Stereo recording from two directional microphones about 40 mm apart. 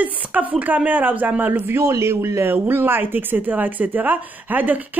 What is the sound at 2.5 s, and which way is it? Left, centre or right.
A woman's voice, right.